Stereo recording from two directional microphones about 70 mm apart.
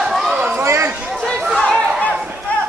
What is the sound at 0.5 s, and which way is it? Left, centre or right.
Chatter, right.